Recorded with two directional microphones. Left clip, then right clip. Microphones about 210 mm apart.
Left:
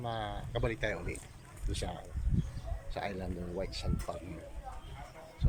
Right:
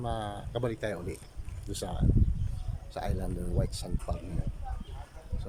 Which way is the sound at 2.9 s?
10° right (ahead or behind).